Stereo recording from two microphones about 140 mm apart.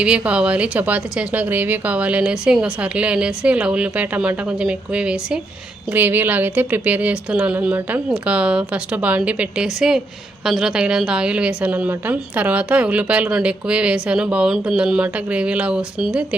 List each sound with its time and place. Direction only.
0.0 s a woman's voice: 10° right (ahead or behind)